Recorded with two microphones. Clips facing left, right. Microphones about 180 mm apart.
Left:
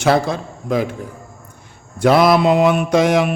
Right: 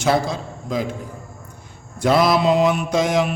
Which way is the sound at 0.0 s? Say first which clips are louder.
Left 3 dB; 60° left (ahead or behind).